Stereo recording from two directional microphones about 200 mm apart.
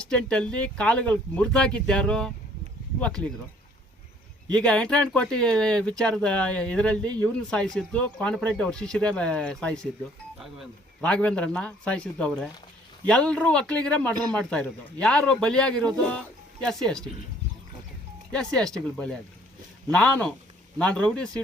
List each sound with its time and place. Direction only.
0.1 s speech: 5° left (ahead or behind)
4.5 s speech: 5° left (ahead or behind)
14.1 s speech: 20° right (ahead or behind)
14.3 s speech: 5° left (ahead or behind)
18.3 s speech: 5° left (ahead or behind)